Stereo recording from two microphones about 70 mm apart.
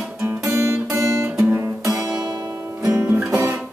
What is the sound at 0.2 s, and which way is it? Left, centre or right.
Music, right.